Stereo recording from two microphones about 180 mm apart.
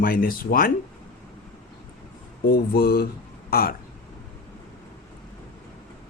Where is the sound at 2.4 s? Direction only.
60° left (ahead or behind).